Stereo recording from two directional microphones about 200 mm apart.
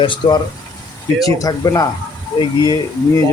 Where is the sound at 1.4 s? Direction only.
15° left (ahead or behind).